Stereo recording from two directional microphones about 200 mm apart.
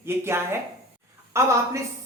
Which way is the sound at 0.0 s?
10° right (ahead or behind).